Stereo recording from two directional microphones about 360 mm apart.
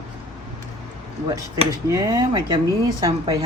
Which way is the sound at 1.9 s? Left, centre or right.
Centre.